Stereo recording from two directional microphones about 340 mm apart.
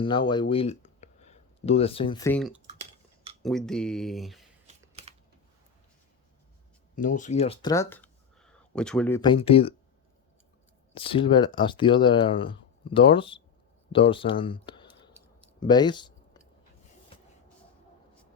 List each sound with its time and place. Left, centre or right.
0.0 s speech: centre
4.6 s typing: centre
6.9 s speech: left
10.9 s speech: centre